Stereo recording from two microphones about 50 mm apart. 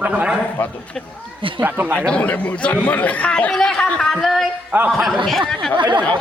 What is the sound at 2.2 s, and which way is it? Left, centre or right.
A man's voice, left.